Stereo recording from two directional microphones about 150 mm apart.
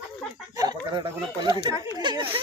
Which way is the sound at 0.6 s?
30° right (ahead or behind).